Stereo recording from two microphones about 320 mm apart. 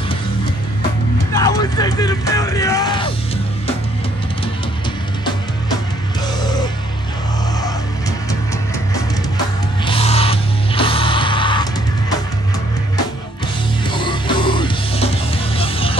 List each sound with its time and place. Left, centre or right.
1.3 s music: centre
6.4 s music: centre
9.8 s music: centre
13.8 s music: centre